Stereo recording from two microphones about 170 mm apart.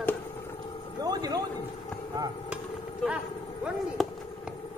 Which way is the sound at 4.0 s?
Centre (ahead or behind).